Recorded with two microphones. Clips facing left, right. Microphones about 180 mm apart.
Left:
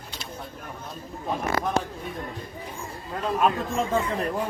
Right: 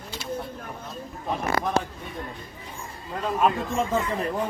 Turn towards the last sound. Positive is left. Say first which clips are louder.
# even
turn(degrees=0)  # may be behind; listen again after turning